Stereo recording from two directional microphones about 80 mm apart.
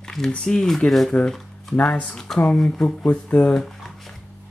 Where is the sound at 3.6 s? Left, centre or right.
Centre.